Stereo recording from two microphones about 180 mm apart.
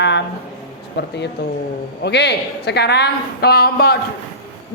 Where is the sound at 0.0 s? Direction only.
75° left (ahead or behind).